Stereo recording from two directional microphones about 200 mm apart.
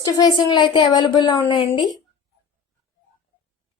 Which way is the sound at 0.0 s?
20° left (ahead or behind).